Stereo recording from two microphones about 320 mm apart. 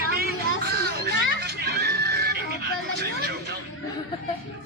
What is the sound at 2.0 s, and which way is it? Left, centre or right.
Music, right.